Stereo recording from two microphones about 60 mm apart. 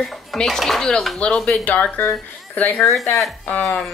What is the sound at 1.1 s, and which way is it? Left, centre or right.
Speech, centre.